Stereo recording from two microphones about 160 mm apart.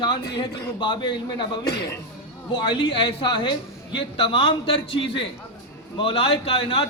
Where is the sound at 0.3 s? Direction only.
30° left (ahead or behind).